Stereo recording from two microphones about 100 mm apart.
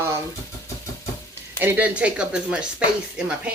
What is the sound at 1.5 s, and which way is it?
Speech, 20° right (ahead or behind).